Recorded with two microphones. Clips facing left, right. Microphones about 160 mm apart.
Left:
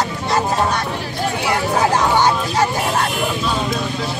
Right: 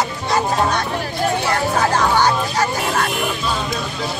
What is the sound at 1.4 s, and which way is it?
Music, 15° left (ahead or behind).